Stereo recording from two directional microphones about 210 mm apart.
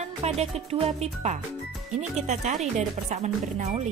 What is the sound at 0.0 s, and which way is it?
Speech, 30° right (ahead or behind).